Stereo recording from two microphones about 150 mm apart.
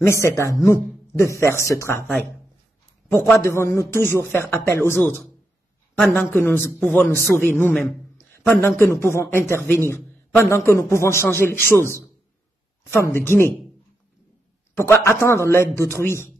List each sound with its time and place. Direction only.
0.0 s a man's voice: 20° left (ahead or behind)
3.1 s a man's voice: 15° left (ahead or behind)
14.8 s a man's voice: 20° left (ahead or behind)